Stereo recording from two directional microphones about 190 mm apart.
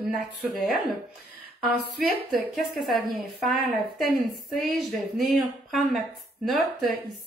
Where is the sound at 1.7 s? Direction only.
Centre (ahead or behind).